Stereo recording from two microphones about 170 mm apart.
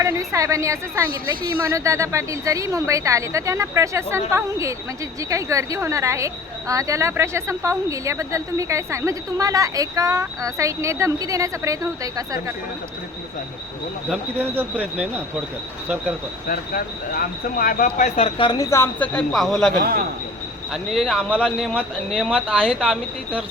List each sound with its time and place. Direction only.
0.0 s a woman's voice: 20° right (ahead or behind)
14.5 s a woman's voice: 10° right (ahead or behind)
16.5 s speech: 55° left (ahead or behind)
18.3 s speech: 25° left (ahead or behind); by 19.7 s centre (ahead or behind)
20.9 s speech: centre (ahead or behind)